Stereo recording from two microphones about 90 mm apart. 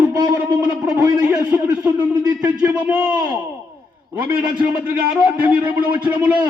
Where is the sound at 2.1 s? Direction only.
50° right (ahead or behind).